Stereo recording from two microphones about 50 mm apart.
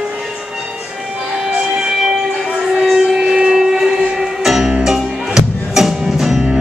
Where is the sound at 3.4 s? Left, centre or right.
Centre.